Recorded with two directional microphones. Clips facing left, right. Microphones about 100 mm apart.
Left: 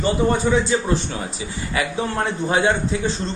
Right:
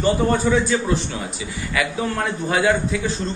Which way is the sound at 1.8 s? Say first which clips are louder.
Even; 30° left (ahead or behind).